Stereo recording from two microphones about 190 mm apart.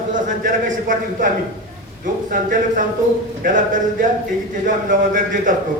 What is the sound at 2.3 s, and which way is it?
A man's voice, 45° right (ahead or behind).